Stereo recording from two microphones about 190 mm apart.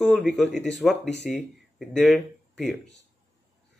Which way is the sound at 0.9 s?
65° left (ahead or behind).